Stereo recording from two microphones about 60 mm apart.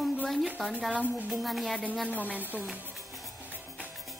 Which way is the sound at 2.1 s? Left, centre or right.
Right.